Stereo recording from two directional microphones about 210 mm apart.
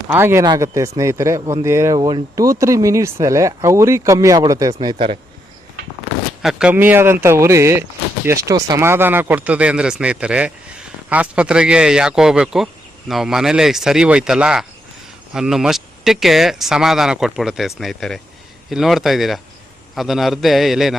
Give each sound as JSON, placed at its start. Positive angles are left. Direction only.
{"t": 0.1, "sound": "speech", "side_deg": -10}
{"t": 6.4, "sound": "speech", "side_deg": -5}